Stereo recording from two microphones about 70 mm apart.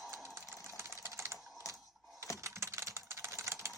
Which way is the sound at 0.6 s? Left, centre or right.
Right.